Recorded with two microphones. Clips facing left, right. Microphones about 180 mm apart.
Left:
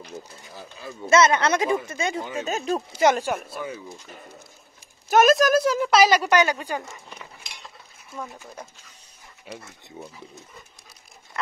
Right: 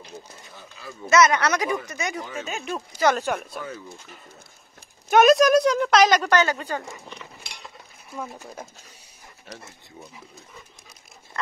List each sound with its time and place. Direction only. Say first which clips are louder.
0.8 s speech: even; 25° left (ahead or behind)
2.4 s speech: left 8 dB; 35° left (ahead or behind)
3.2 s speech: even; 5° left (ahead or behind)
5.1 s speech: right 2 dB; centre (ahead or behind)
9.5 s speech: left 3 dB; 10° left (ahead or behind)